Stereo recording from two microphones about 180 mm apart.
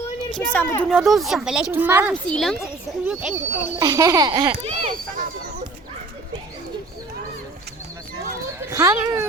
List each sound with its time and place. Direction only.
0.3 s speech: 10° left (ahead or behind)
0.9 s speech: centre (ahead or behind)
2.2 s speech: 5° left (ahead or behind)
3.8 s speech: 20° right (ahead or behind)
4.8 s speech: 50° right (ahead or behind)
8.7 s speech: 15° right (ahead or behind)